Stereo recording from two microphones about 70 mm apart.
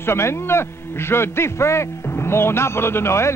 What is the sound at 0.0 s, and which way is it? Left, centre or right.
A man's voice, left.